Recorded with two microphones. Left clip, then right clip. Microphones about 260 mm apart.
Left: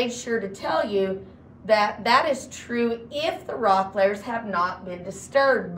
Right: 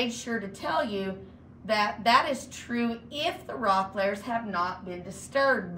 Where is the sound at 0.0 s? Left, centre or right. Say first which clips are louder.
Left 5 dB; centre.